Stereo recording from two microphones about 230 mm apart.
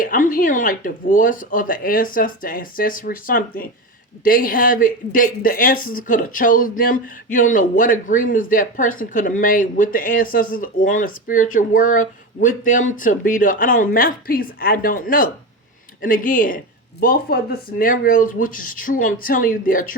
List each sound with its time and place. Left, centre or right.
0.0 s speech: left